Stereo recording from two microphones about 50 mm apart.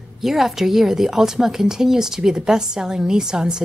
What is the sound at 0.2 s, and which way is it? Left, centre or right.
A woman's voice, centre.